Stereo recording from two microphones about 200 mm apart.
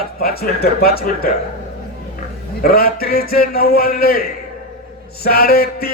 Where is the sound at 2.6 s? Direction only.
50° left (ahead or behind).